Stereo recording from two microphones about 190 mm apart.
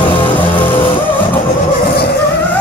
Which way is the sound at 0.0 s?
25° left (ahead or behind).